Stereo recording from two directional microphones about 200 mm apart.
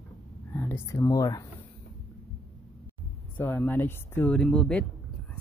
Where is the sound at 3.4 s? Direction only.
10° left (ahead or behind).